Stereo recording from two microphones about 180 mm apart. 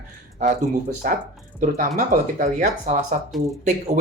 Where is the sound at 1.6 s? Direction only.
45° right (ahead or behind).